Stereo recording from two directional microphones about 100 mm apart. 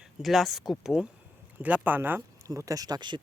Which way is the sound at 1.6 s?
15° right (ahead or behind).